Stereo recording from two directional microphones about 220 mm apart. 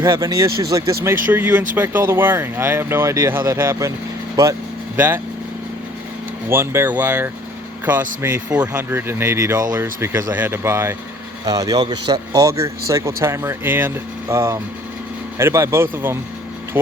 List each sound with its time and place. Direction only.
0.0 s speech: 15° right (ahead or behind)
4.9 s speech: 10° right (ahead or behind)
6.5 s speech: 10° right (ahead or behind)